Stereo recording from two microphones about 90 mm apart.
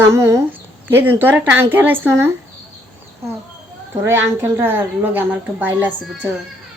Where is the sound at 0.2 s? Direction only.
30° right (ahead or behind).